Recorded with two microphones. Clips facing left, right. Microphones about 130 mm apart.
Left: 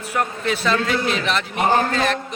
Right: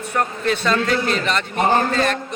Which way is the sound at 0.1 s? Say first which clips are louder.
Right 1 dB; 5° left (ahead or behind).